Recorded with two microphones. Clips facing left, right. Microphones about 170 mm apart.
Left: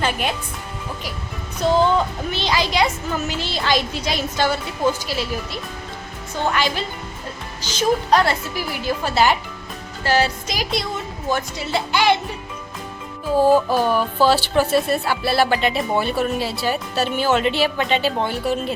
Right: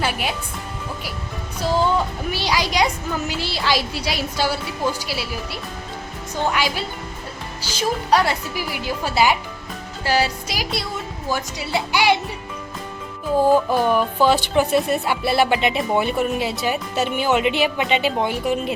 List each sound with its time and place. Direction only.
0.0 s speech: 10° right (ahead or behind)
1.6 s a woman's voice: 5° right (ahead or behind)
13.4 s music: 10° left (ahead or behind)
14.2 s a woman's voice: 15° right (ahead or behind)